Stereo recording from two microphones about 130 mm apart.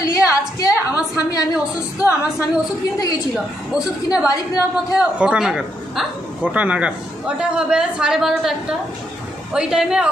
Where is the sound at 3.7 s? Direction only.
5° right (ahead or behind).